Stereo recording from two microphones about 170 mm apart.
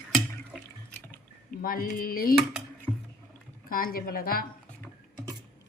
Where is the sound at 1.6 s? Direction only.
55° left (ahead or behind).